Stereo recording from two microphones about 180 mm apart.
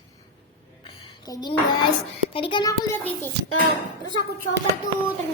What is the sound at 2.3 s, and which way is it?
Speech, 30° left (ahead or behind).